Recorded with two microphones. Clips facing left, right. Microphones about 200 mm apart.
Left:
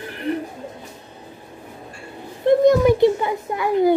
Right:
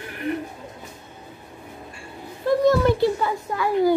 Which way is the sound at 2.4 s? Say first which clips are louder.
Left 4 dB; 15° left (ahead or behind).